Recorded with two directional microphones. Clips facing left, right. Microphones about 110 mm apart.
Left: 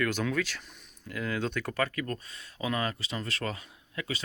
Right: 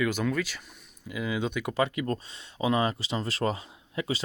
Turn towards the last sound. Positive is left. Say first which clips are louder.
# right 5 dB
turn(degrees=-25)  # may be behind; listen again after turning